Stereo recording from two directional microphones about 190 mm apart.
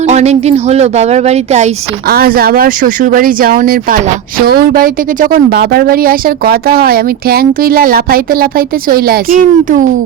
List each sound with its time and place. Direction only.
0.0 s a woman's voice: 35° right (ahead or behind)
2.0 s speech: 50° right (ahead or behind)